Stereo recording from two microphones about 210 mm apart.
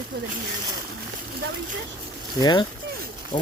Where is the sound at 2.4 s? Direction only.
20° left (ahead or behind).